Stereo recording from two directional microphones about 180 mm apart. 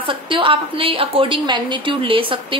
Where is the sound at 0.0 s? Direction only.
30° right (ahead or behind).